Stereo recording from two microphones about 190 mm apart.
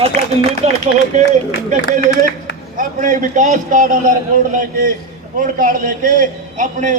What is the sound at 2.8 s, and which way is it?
A man's voice, 45° right (ahead or behind).